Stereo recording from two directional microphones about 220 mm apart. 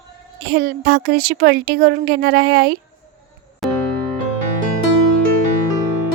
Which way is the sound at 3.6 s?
Centre (ahead or behind).